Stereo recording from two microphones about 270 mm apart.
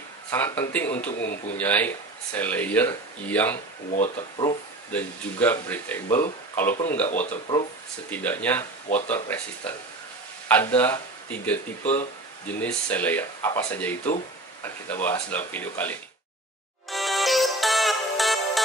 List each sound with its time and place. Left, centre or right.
0.3 s speech: centre
3.9 s speech: left
4.9 s speech: centre
7.1 s speech: left
8.1 s speech: centre
16.9 s music: centre